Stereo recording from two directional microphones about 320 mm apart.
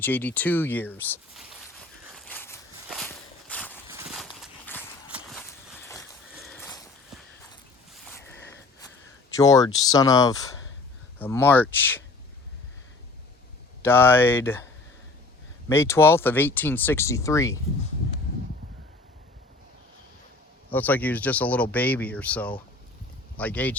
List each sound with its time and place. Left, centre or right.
0.0 s a sound: centre
8.2 s a sound: left
9.3 s speech: centre
13.8 s speech: centre
15.7 s speech: centre
20.7 s speech: centre